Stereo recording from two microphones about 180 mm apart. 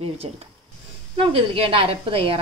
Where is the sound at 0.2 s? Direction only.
30° right (ahead or behind).